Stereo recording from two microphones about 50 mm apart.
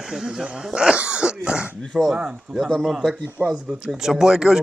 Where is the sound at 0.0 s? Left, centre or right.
Centre.